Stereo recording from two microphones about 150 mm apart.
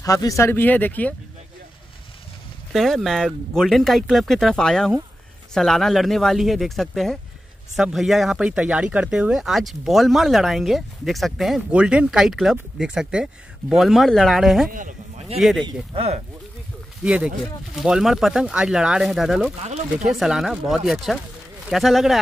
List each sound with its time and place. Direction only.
0.0 s speech: 25° left (ahead or behind)
2.7 s speech: centre (ahead or behind)
14.7 s a sound: 60° right (ahead or behind)
15.6 s speech: 40° right (ahead or behind)
17.0 s speech: 5° right (ahead or behind)
19.6 s speech: 45° right (ahead or behind)
20.1 s speech: centre (ahead or behind)